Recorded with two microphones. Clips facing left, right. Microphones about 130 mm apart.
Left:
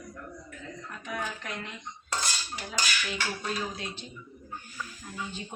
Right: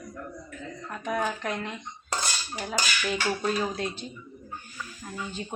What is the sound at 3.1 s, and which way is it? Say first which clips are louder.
Speech: right 6 dB; 50° right (ahead or behind).